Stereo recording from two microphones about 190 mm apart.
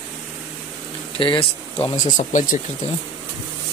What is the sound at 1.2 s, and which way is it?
Speech, 30° left (ahead or behind).